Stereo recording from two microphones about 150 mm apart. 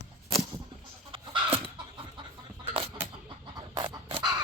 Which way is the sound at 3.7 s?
30° right (ahead or behind).